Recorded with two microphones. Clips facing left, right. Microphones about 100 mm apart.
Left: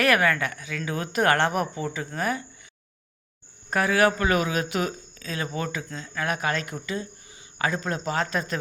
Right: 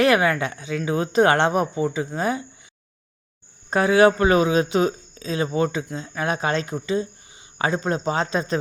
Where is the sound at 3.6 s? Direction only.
25° right (ahead or behind).